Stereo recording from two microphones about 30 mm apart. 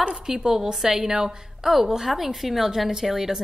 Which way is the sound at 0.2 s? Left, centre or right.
Right.